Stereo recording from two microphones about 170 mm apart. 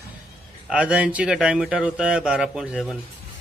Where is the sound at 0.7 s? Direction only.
10° right (ahead or behind).